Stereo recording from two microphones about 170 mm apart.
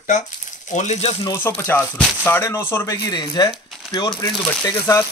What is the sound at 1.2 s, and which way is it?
Speech, 15° left (ahead or behind).